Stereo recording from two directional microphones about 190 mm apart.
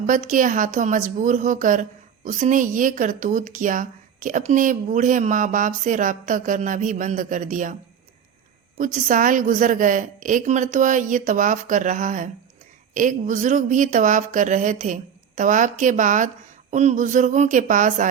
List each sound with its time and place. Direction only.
0.0 s a woman's voice: 40° right (ahead or behind)
8.8 s a woman's voice: 45° right (ahead or behind)